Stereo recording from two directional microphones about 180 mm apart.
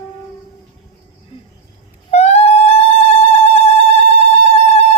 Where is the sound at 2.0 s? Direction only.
35° left (ahead or behind).